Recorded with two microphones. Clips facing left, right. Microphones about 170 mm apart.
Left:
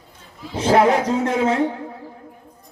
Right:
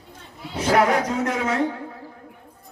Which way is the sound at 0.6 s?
30° left (ahead or behind).